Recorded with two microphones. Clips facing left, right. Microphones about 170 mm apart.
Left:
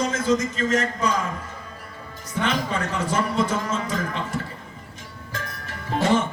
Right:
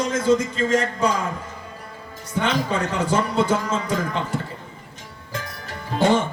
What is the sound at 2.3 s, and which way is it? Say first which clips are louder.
A man's voice: right 2 dB; 30° right (ahead or behind).